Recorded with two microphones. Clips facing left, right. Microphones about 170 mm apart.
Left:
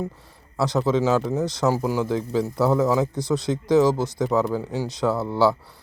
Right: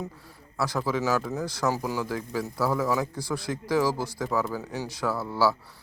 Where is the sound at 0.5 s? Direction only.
20° left (ahead or behind).